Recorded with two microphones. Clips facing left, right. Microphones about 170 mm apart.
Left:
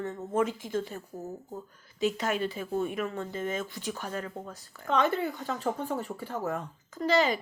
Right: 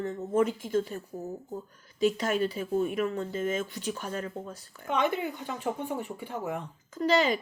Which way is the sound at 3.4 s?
40° left (ahead or behind).